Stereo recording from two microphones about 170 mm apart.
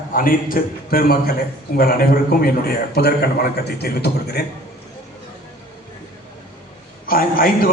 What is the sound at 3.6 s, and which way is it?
Speech, 70° left (ahead or behind).